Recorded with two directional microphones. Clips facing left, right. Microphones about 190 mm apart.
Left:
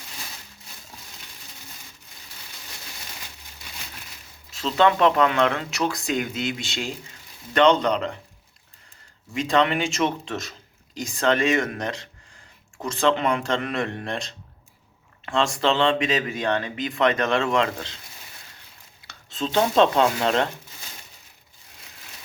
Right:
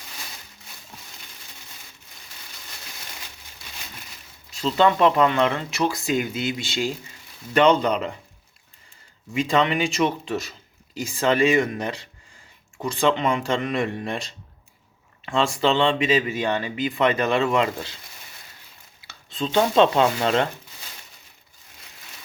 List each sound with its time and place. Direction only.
4.5 s speech: centre (ahead or behind)
9.3 s speech: centre (ahead or behind)
19.4 s speech: centre (ahead or behind)